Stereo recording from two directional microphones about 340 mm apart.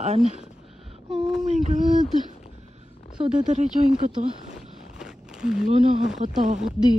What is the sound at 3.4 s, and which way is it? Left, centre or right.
Speech, right.